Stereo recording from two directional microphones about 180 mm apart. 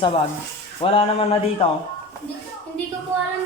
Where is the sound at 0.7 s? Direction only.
30° left (ahead or behind).